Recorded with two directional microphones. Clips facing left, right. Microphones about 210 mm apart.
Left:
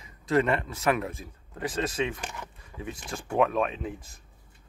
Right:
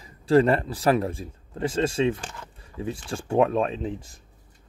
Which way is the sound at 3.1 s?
30° right (ahead or behind).